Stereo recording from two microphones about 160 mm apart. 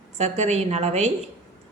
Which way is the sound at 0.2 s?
45° right (ahead or behind).